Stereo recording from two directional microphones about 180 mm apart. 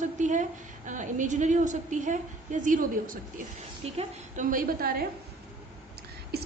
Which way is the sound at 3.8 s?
35° right (ahead or behind).